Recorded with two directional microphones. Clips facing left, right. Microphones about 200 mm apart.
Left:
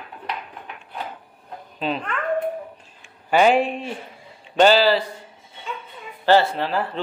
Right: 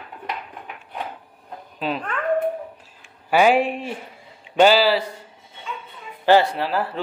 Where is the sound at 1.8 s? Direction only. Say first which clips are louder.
Right 1 dB; 5° right (ahead or behind).